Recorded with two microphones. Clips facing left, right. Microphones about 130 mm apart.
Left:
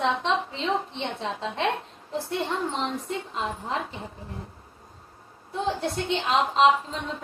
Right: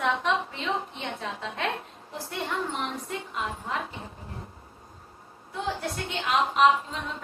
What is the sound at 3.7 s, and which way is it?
Speech, 30° left (ahead or behind).